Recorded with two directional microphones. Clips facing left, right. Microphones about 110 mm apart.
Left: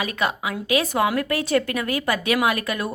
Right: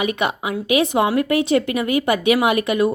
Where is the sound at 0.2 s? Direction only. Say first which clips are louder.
Right 3 dB; 25° right (ahead or behind).